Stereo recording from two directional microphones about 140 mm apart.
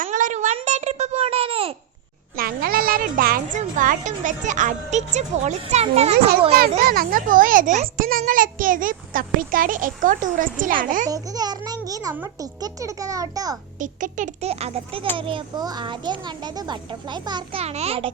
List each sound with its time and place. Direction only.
0.0 s a sound: 65° right (ahead or behind); by 1.7 s 40° right (ahead or behind)
2.3 s speech: 90° right; by 6.1 s 45° right (ahead or behind)
6.8 s a child's voice: 90° right; by 11.1 s 75° right (ahead or behind)
11.1 s a child's voice: 25° right (ahead or behind)
13.7 s a child's voice: 65° right (ahead or behind); by 17.6 s 30° right (ahead or behind)
17.6 s a child's voice: 50° right (ahead or behind)